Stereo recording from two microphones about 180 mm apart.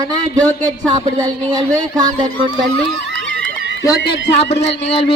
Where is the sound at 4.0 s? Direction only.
75° left (ahead or behind).